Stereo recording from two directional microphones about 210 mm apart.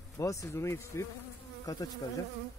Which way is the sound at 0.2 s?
15° left (ahead or behind).